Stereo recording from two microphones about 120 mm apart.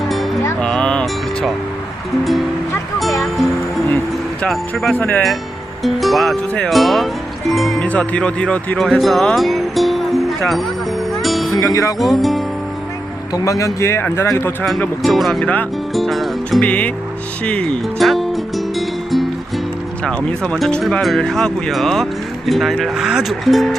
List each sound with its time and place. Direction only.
0.6 s music: 5° left (ahead or behind)
3.2 s music: centre (ahead or behind)
4.9 s speech: 15° left (ahead or behind)
5.8 s speech: centre (ahead or behind)
8.8 s music: centre (ahead or behind)
11.6 s speech: 25° left (ahead or behind)
11.9 s speech: centre (ahead or behind)
13.3 s speech: 30° left (ahead or behind)
15.0 s speech: centre (ahead or behind)
17.4 s music: 10° left (ahead or behind)
20.1 s speech: 5° left (ahead or behind)